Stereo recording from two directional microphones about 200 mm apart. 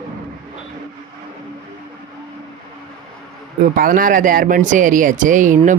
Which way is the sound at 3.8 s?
45° right (ahead or behind).